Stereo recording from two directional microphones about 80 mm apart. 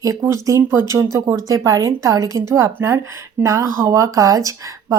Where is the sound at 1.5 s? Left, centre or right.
Right.